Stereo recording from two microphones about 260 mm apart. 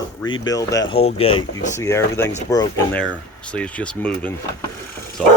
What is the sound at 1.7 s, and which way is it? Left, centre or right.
Speech, centre.